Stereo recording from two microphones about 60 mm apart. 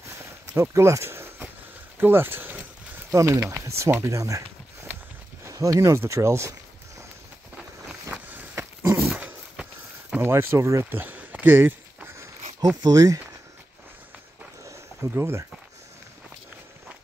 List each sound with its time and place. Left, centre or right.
0.2 s walk: right
2.0 s a sound: right
3.1 s speech: right
5.5 s speech: right
5.9 s speech: right
8.1 s a sound: right
8.8 s dog: right
9.1 s dog: centre
10.2 s speech: right
10.9 s speech: right
11.1 s a sound: right
12.8 s speech: right
14.6 s a sound: right
15.0 s speech: right